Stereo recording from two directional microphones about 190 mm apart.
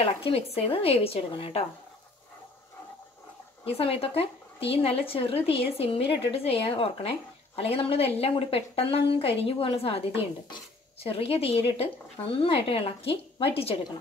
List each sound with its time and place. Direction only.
0.0 s a woman's voice: 30° left (ahead or behind)
3.6 s a woman's voice: 30° left (ahead or behind)